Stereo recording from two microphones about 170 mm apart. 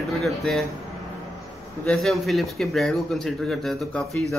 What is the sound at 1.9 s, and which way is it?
Speech, centre (ahead or behind).